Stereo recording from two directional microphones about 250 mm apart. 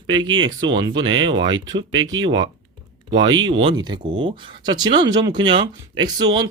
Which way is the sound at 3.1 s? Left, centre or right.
Right.